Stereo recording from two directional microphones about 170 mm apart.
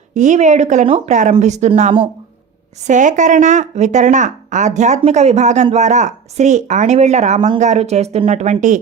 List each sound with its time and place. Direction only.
0.1 s speech: 45° right (ahead or behind)